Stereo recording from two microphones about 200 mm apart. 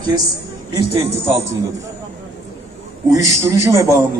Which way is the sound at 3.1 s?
15° right (ahead or behind).